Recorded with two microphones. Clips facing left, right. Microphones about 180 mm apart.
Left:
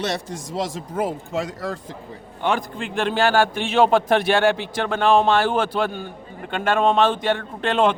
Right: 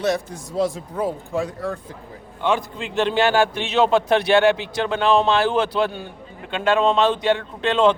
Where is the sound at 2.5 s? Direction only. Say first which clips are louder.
Right 1 dB; 50° left (ahead or behind).